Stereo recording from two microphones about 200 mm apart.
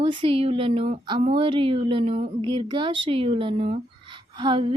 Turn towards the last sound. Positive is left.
turn(degrees=-25)  # may be behind; listen again after turning